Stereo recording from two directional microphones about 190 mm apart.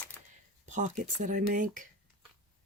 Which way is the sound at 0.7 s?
40° right (ahead or behind).